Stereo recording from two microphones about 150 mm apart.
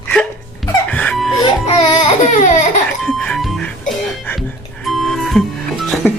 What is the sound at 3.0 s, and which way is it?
Music, 5° left (ahead or behind).